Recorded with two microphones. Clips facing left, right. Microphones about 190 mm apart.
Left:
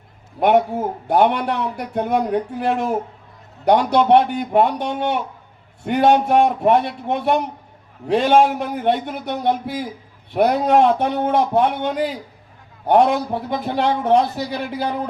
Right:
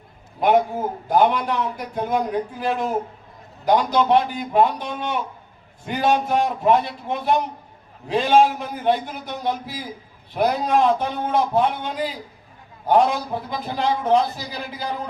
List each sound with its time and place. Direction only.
0.3 s a man's voice: 60° left (ahead or behind)